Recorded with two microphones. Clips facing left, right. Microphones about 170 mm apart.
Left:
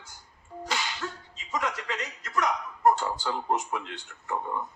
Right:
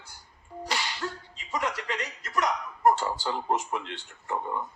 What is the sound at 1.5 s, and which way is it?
A man's voice, 25° right (ahead or behind).